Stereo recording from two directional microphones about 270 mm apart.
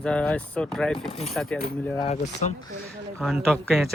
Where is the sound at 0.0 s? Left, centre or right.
Centre.